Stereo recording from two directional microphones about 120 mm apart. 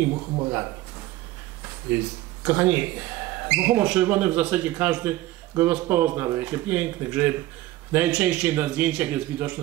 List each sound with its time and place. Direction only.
0.1 s a man's voice: 30° right (ahead or behind)
1.9 s speech: 15° right (ahead or behind)